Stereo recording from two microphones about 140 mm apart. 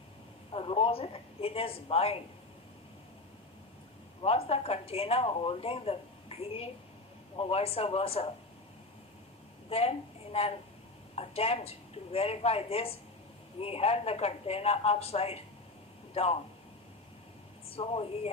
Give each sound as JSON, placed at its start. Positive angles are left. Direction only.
{"t": 0.5, "sound": "speech", "side_deg": 45}
{"t": 4.2, "sound": "speech", "side_deg": 45}
{"t": 9.6, "sound": "a woman's voice", "side_deg": 45}
{"t": 17.7, "sound": "speech", "side_deg": 45}